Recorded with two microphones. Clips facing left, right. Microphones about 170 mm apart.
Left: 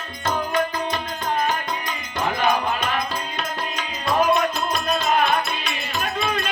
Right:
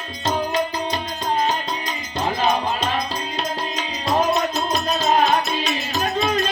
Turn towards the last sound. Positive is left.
turn(degrees=-40)  # may be behind; listen again after turning